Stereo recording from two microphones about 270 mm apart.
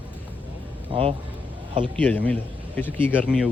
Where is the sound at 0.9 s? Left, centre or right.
Right.